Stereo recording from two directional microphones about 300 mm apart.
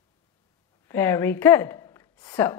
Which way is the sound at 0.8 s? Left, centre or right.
Centre.